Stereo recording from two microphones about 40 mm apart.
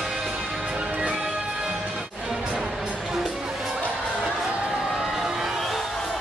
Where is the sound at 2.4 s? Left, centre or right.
Right.